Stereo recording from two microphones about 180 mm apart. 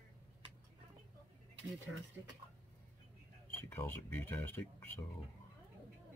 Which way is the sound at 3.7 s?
10° left (ahead or behind).